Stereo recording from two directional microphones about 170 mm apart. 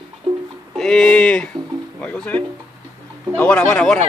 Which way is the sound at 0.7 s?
5° left (ahead or behind).